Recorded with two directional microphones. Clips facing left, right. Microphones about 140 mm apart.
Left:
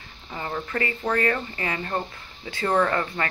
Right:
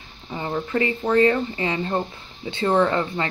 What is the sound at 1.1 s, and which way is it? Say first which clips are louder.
Speech: right 8 dB; 20° right (ahead or behind).